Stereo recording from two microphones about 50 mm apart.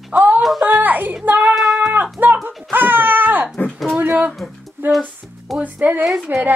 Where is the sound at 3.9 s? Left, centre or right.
Right.